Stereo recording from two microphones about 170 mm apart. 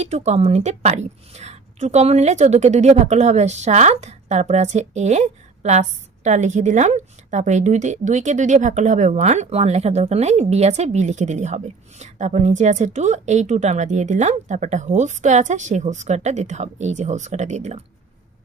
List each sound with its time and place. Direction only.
0.0 s a woman's voice: 40° right (ahead or behind)